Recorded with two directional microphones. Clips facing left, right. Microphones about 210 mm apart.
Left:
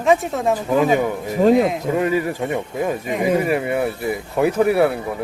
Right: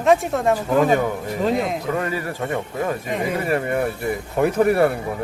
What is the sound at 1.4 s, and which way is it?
Speech, 45° left (ahead or behind).